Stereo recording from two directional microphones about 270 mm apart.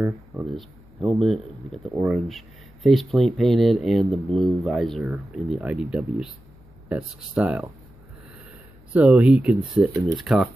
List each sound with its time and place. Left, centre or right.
0.0 s speech: centre
8.9 s speech: centre
9.6 s speech: centre
10.1 s speech: centre